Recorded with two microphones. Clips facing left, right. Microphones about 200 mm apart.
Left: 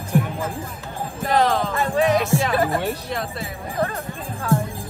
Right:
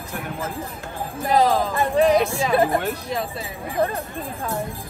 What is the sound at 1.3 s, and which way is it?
Jingle bell, 10° right (ahead or behind).